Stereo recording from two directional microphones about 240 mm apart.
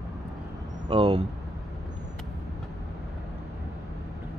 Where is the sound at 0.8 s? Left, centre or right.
Right.